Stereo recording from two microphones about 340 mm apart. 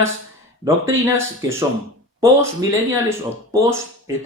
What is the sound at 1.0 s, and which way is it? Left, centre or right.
Speech, centre.